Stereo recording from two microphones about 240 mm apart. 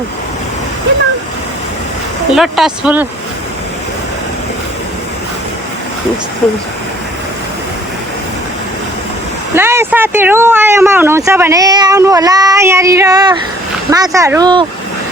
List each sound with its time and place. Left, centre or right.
2.3 s speech: centre
9.6 s speech: centre